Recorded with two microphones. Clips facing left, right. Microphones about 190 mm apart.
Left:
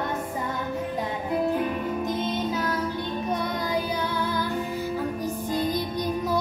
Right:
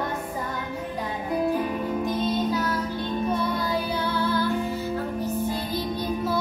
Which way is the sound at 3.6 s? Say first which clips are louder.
Even; 15° left (ahead or behind).